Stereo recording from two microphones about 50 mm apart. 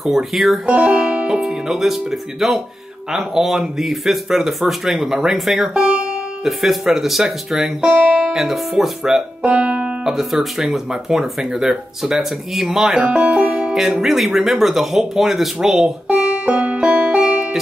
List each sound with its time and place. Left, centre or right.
0.0 s speech: centre
0.7 s speech: right; by 5.7 s centre
5.8 s music: centre
6.4 s speech: centre
9.4 s music: right
10.0 s speech: centre
16.2 s music: right